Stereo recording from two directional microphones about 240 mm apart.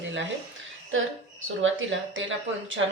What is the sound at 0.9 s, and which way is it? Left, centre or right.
A woman's voice, right.